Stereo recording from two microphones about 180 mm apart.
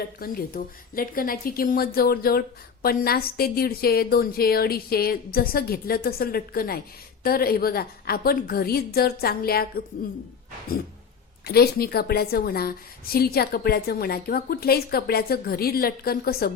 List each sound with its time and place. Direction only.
0.2 s a woman's voice: 50° left (ahead or behind)
11.4 s a woman's voice: 60° left (ahead or behind)